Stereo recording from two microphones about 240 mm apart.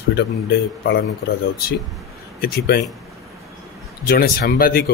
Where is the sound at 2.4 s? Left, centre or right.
Left.